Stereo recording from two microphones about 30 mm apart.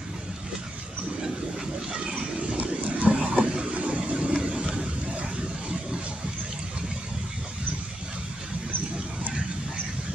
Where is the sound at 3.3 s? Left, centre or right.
Right.